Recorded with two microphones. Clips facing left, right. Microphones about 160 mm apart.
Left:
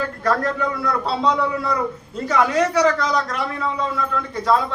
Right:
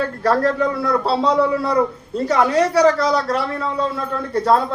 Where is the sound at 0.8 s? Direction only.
30° right (ahead or behind).